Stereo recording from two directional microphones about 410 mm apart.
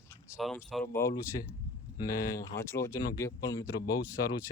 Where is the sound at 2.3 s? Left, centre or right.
Centre.